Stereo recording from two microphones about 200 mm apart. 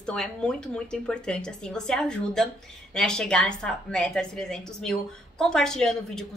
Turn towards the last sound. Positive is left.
turn(degrees=5)  # may be behind; listen again after turning